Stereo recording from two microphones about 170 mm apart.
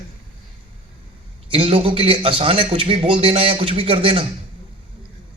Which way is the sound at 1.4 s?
35° right (ahead or behind).